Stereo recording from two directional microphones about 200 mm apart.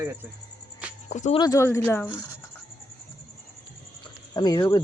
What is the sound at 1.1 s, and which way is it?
Speech, 35° left (ahead or behind).